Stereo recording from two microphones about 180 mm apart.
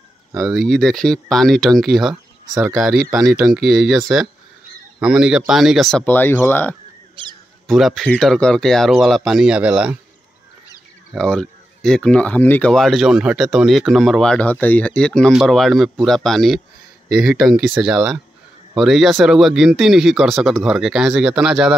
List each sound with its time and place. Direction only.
0.4 s speech: centre (ahead or behind)
5.0 s speech: 5° right (ahead or behind)
7.2 s a sound: 30° right (ahead or behind)
7.6 s speech: centre (ahead or behind)
11.1 s speech: 5° left (ahead or behind)